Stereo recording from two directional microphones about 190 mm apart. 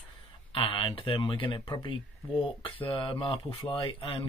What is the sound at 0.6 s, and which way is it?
Speech, 25° left (ahead or behind).